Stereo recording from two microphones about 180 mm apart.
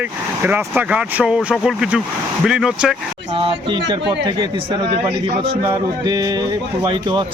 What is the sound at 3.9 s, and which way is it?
Speech, 25° right (ahead or behind).